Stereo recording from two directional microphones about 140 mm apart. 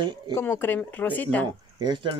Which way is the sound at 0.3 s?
15° left (ahead or behind).